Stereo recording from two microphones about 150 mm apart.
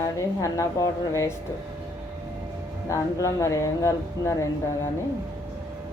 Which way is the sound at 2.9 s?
20° left (ahead or behind).